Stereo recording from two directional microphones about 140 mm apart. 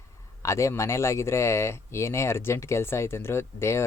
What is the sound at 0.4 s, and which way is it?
Speech, 20° left (ahead or behind).